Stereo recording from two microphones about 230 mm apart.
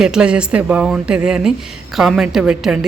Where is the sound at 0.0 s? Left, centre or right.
Centre.